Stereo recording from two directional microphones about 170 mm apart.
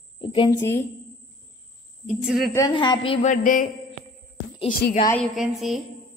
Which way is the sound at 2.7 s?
30° left (ahead or behind).